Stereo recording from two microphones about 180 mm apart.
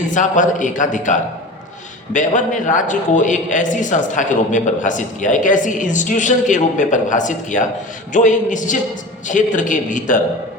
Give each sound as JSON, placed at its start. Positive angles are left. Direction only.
{"t": 0.1, "sound": "a man's voice", "side_deg": 45}